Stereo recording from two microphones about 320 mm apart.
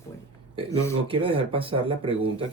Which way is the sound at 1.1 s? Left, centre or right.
Centre.